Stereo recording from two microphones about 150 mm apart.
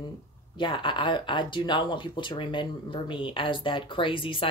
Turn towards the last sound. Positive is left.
turn(degrees=35)  # may be behind; listen again after turning